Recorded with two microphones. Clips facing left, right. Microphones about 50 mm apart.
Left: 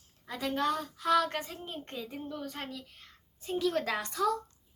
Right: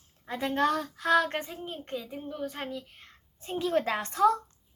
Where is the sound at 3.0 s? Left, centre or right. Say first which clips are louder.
Right 3 dB; right.